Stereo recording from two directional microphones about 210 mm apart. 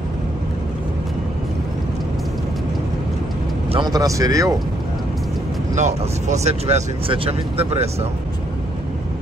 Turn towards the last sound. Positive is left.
turn(degrees=-30)  # may be behind; listen again after turning